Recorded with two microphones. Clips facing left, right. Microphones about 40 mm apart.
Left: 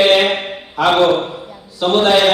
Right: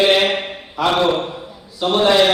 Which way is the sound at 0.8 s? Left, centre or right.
Left.